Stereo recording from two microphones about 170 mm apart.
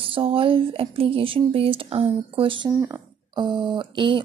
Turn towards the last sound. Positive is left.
turn(degrees=-30)  # may be behind; listen again after turning